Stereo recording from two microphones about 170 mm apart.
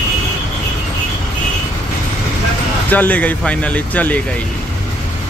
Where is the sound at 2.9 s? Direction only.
10° left (ahead or behind).